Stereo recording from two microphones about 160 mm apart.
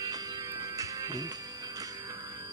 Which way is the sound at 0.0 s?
20° right (ahead or behind).